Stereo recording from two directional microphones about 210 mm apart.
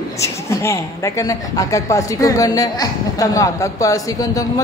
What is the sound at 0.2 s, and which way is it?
Speech, 15° left (ahead or behind).